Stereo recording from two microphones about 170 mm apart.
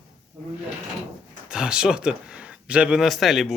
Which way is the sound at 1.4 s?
5° right (ahead or behind).